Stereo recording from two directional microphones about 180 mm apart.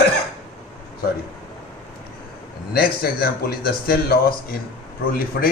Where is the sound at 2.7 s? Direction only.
55° left (ahead or behind).